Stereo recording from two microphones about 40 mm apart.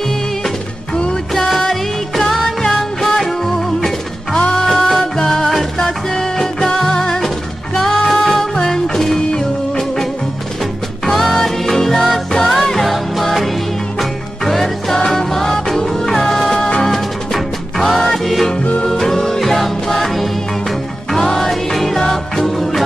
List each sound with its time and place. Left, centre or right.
2.1 s music: centre
11.1 s music: centre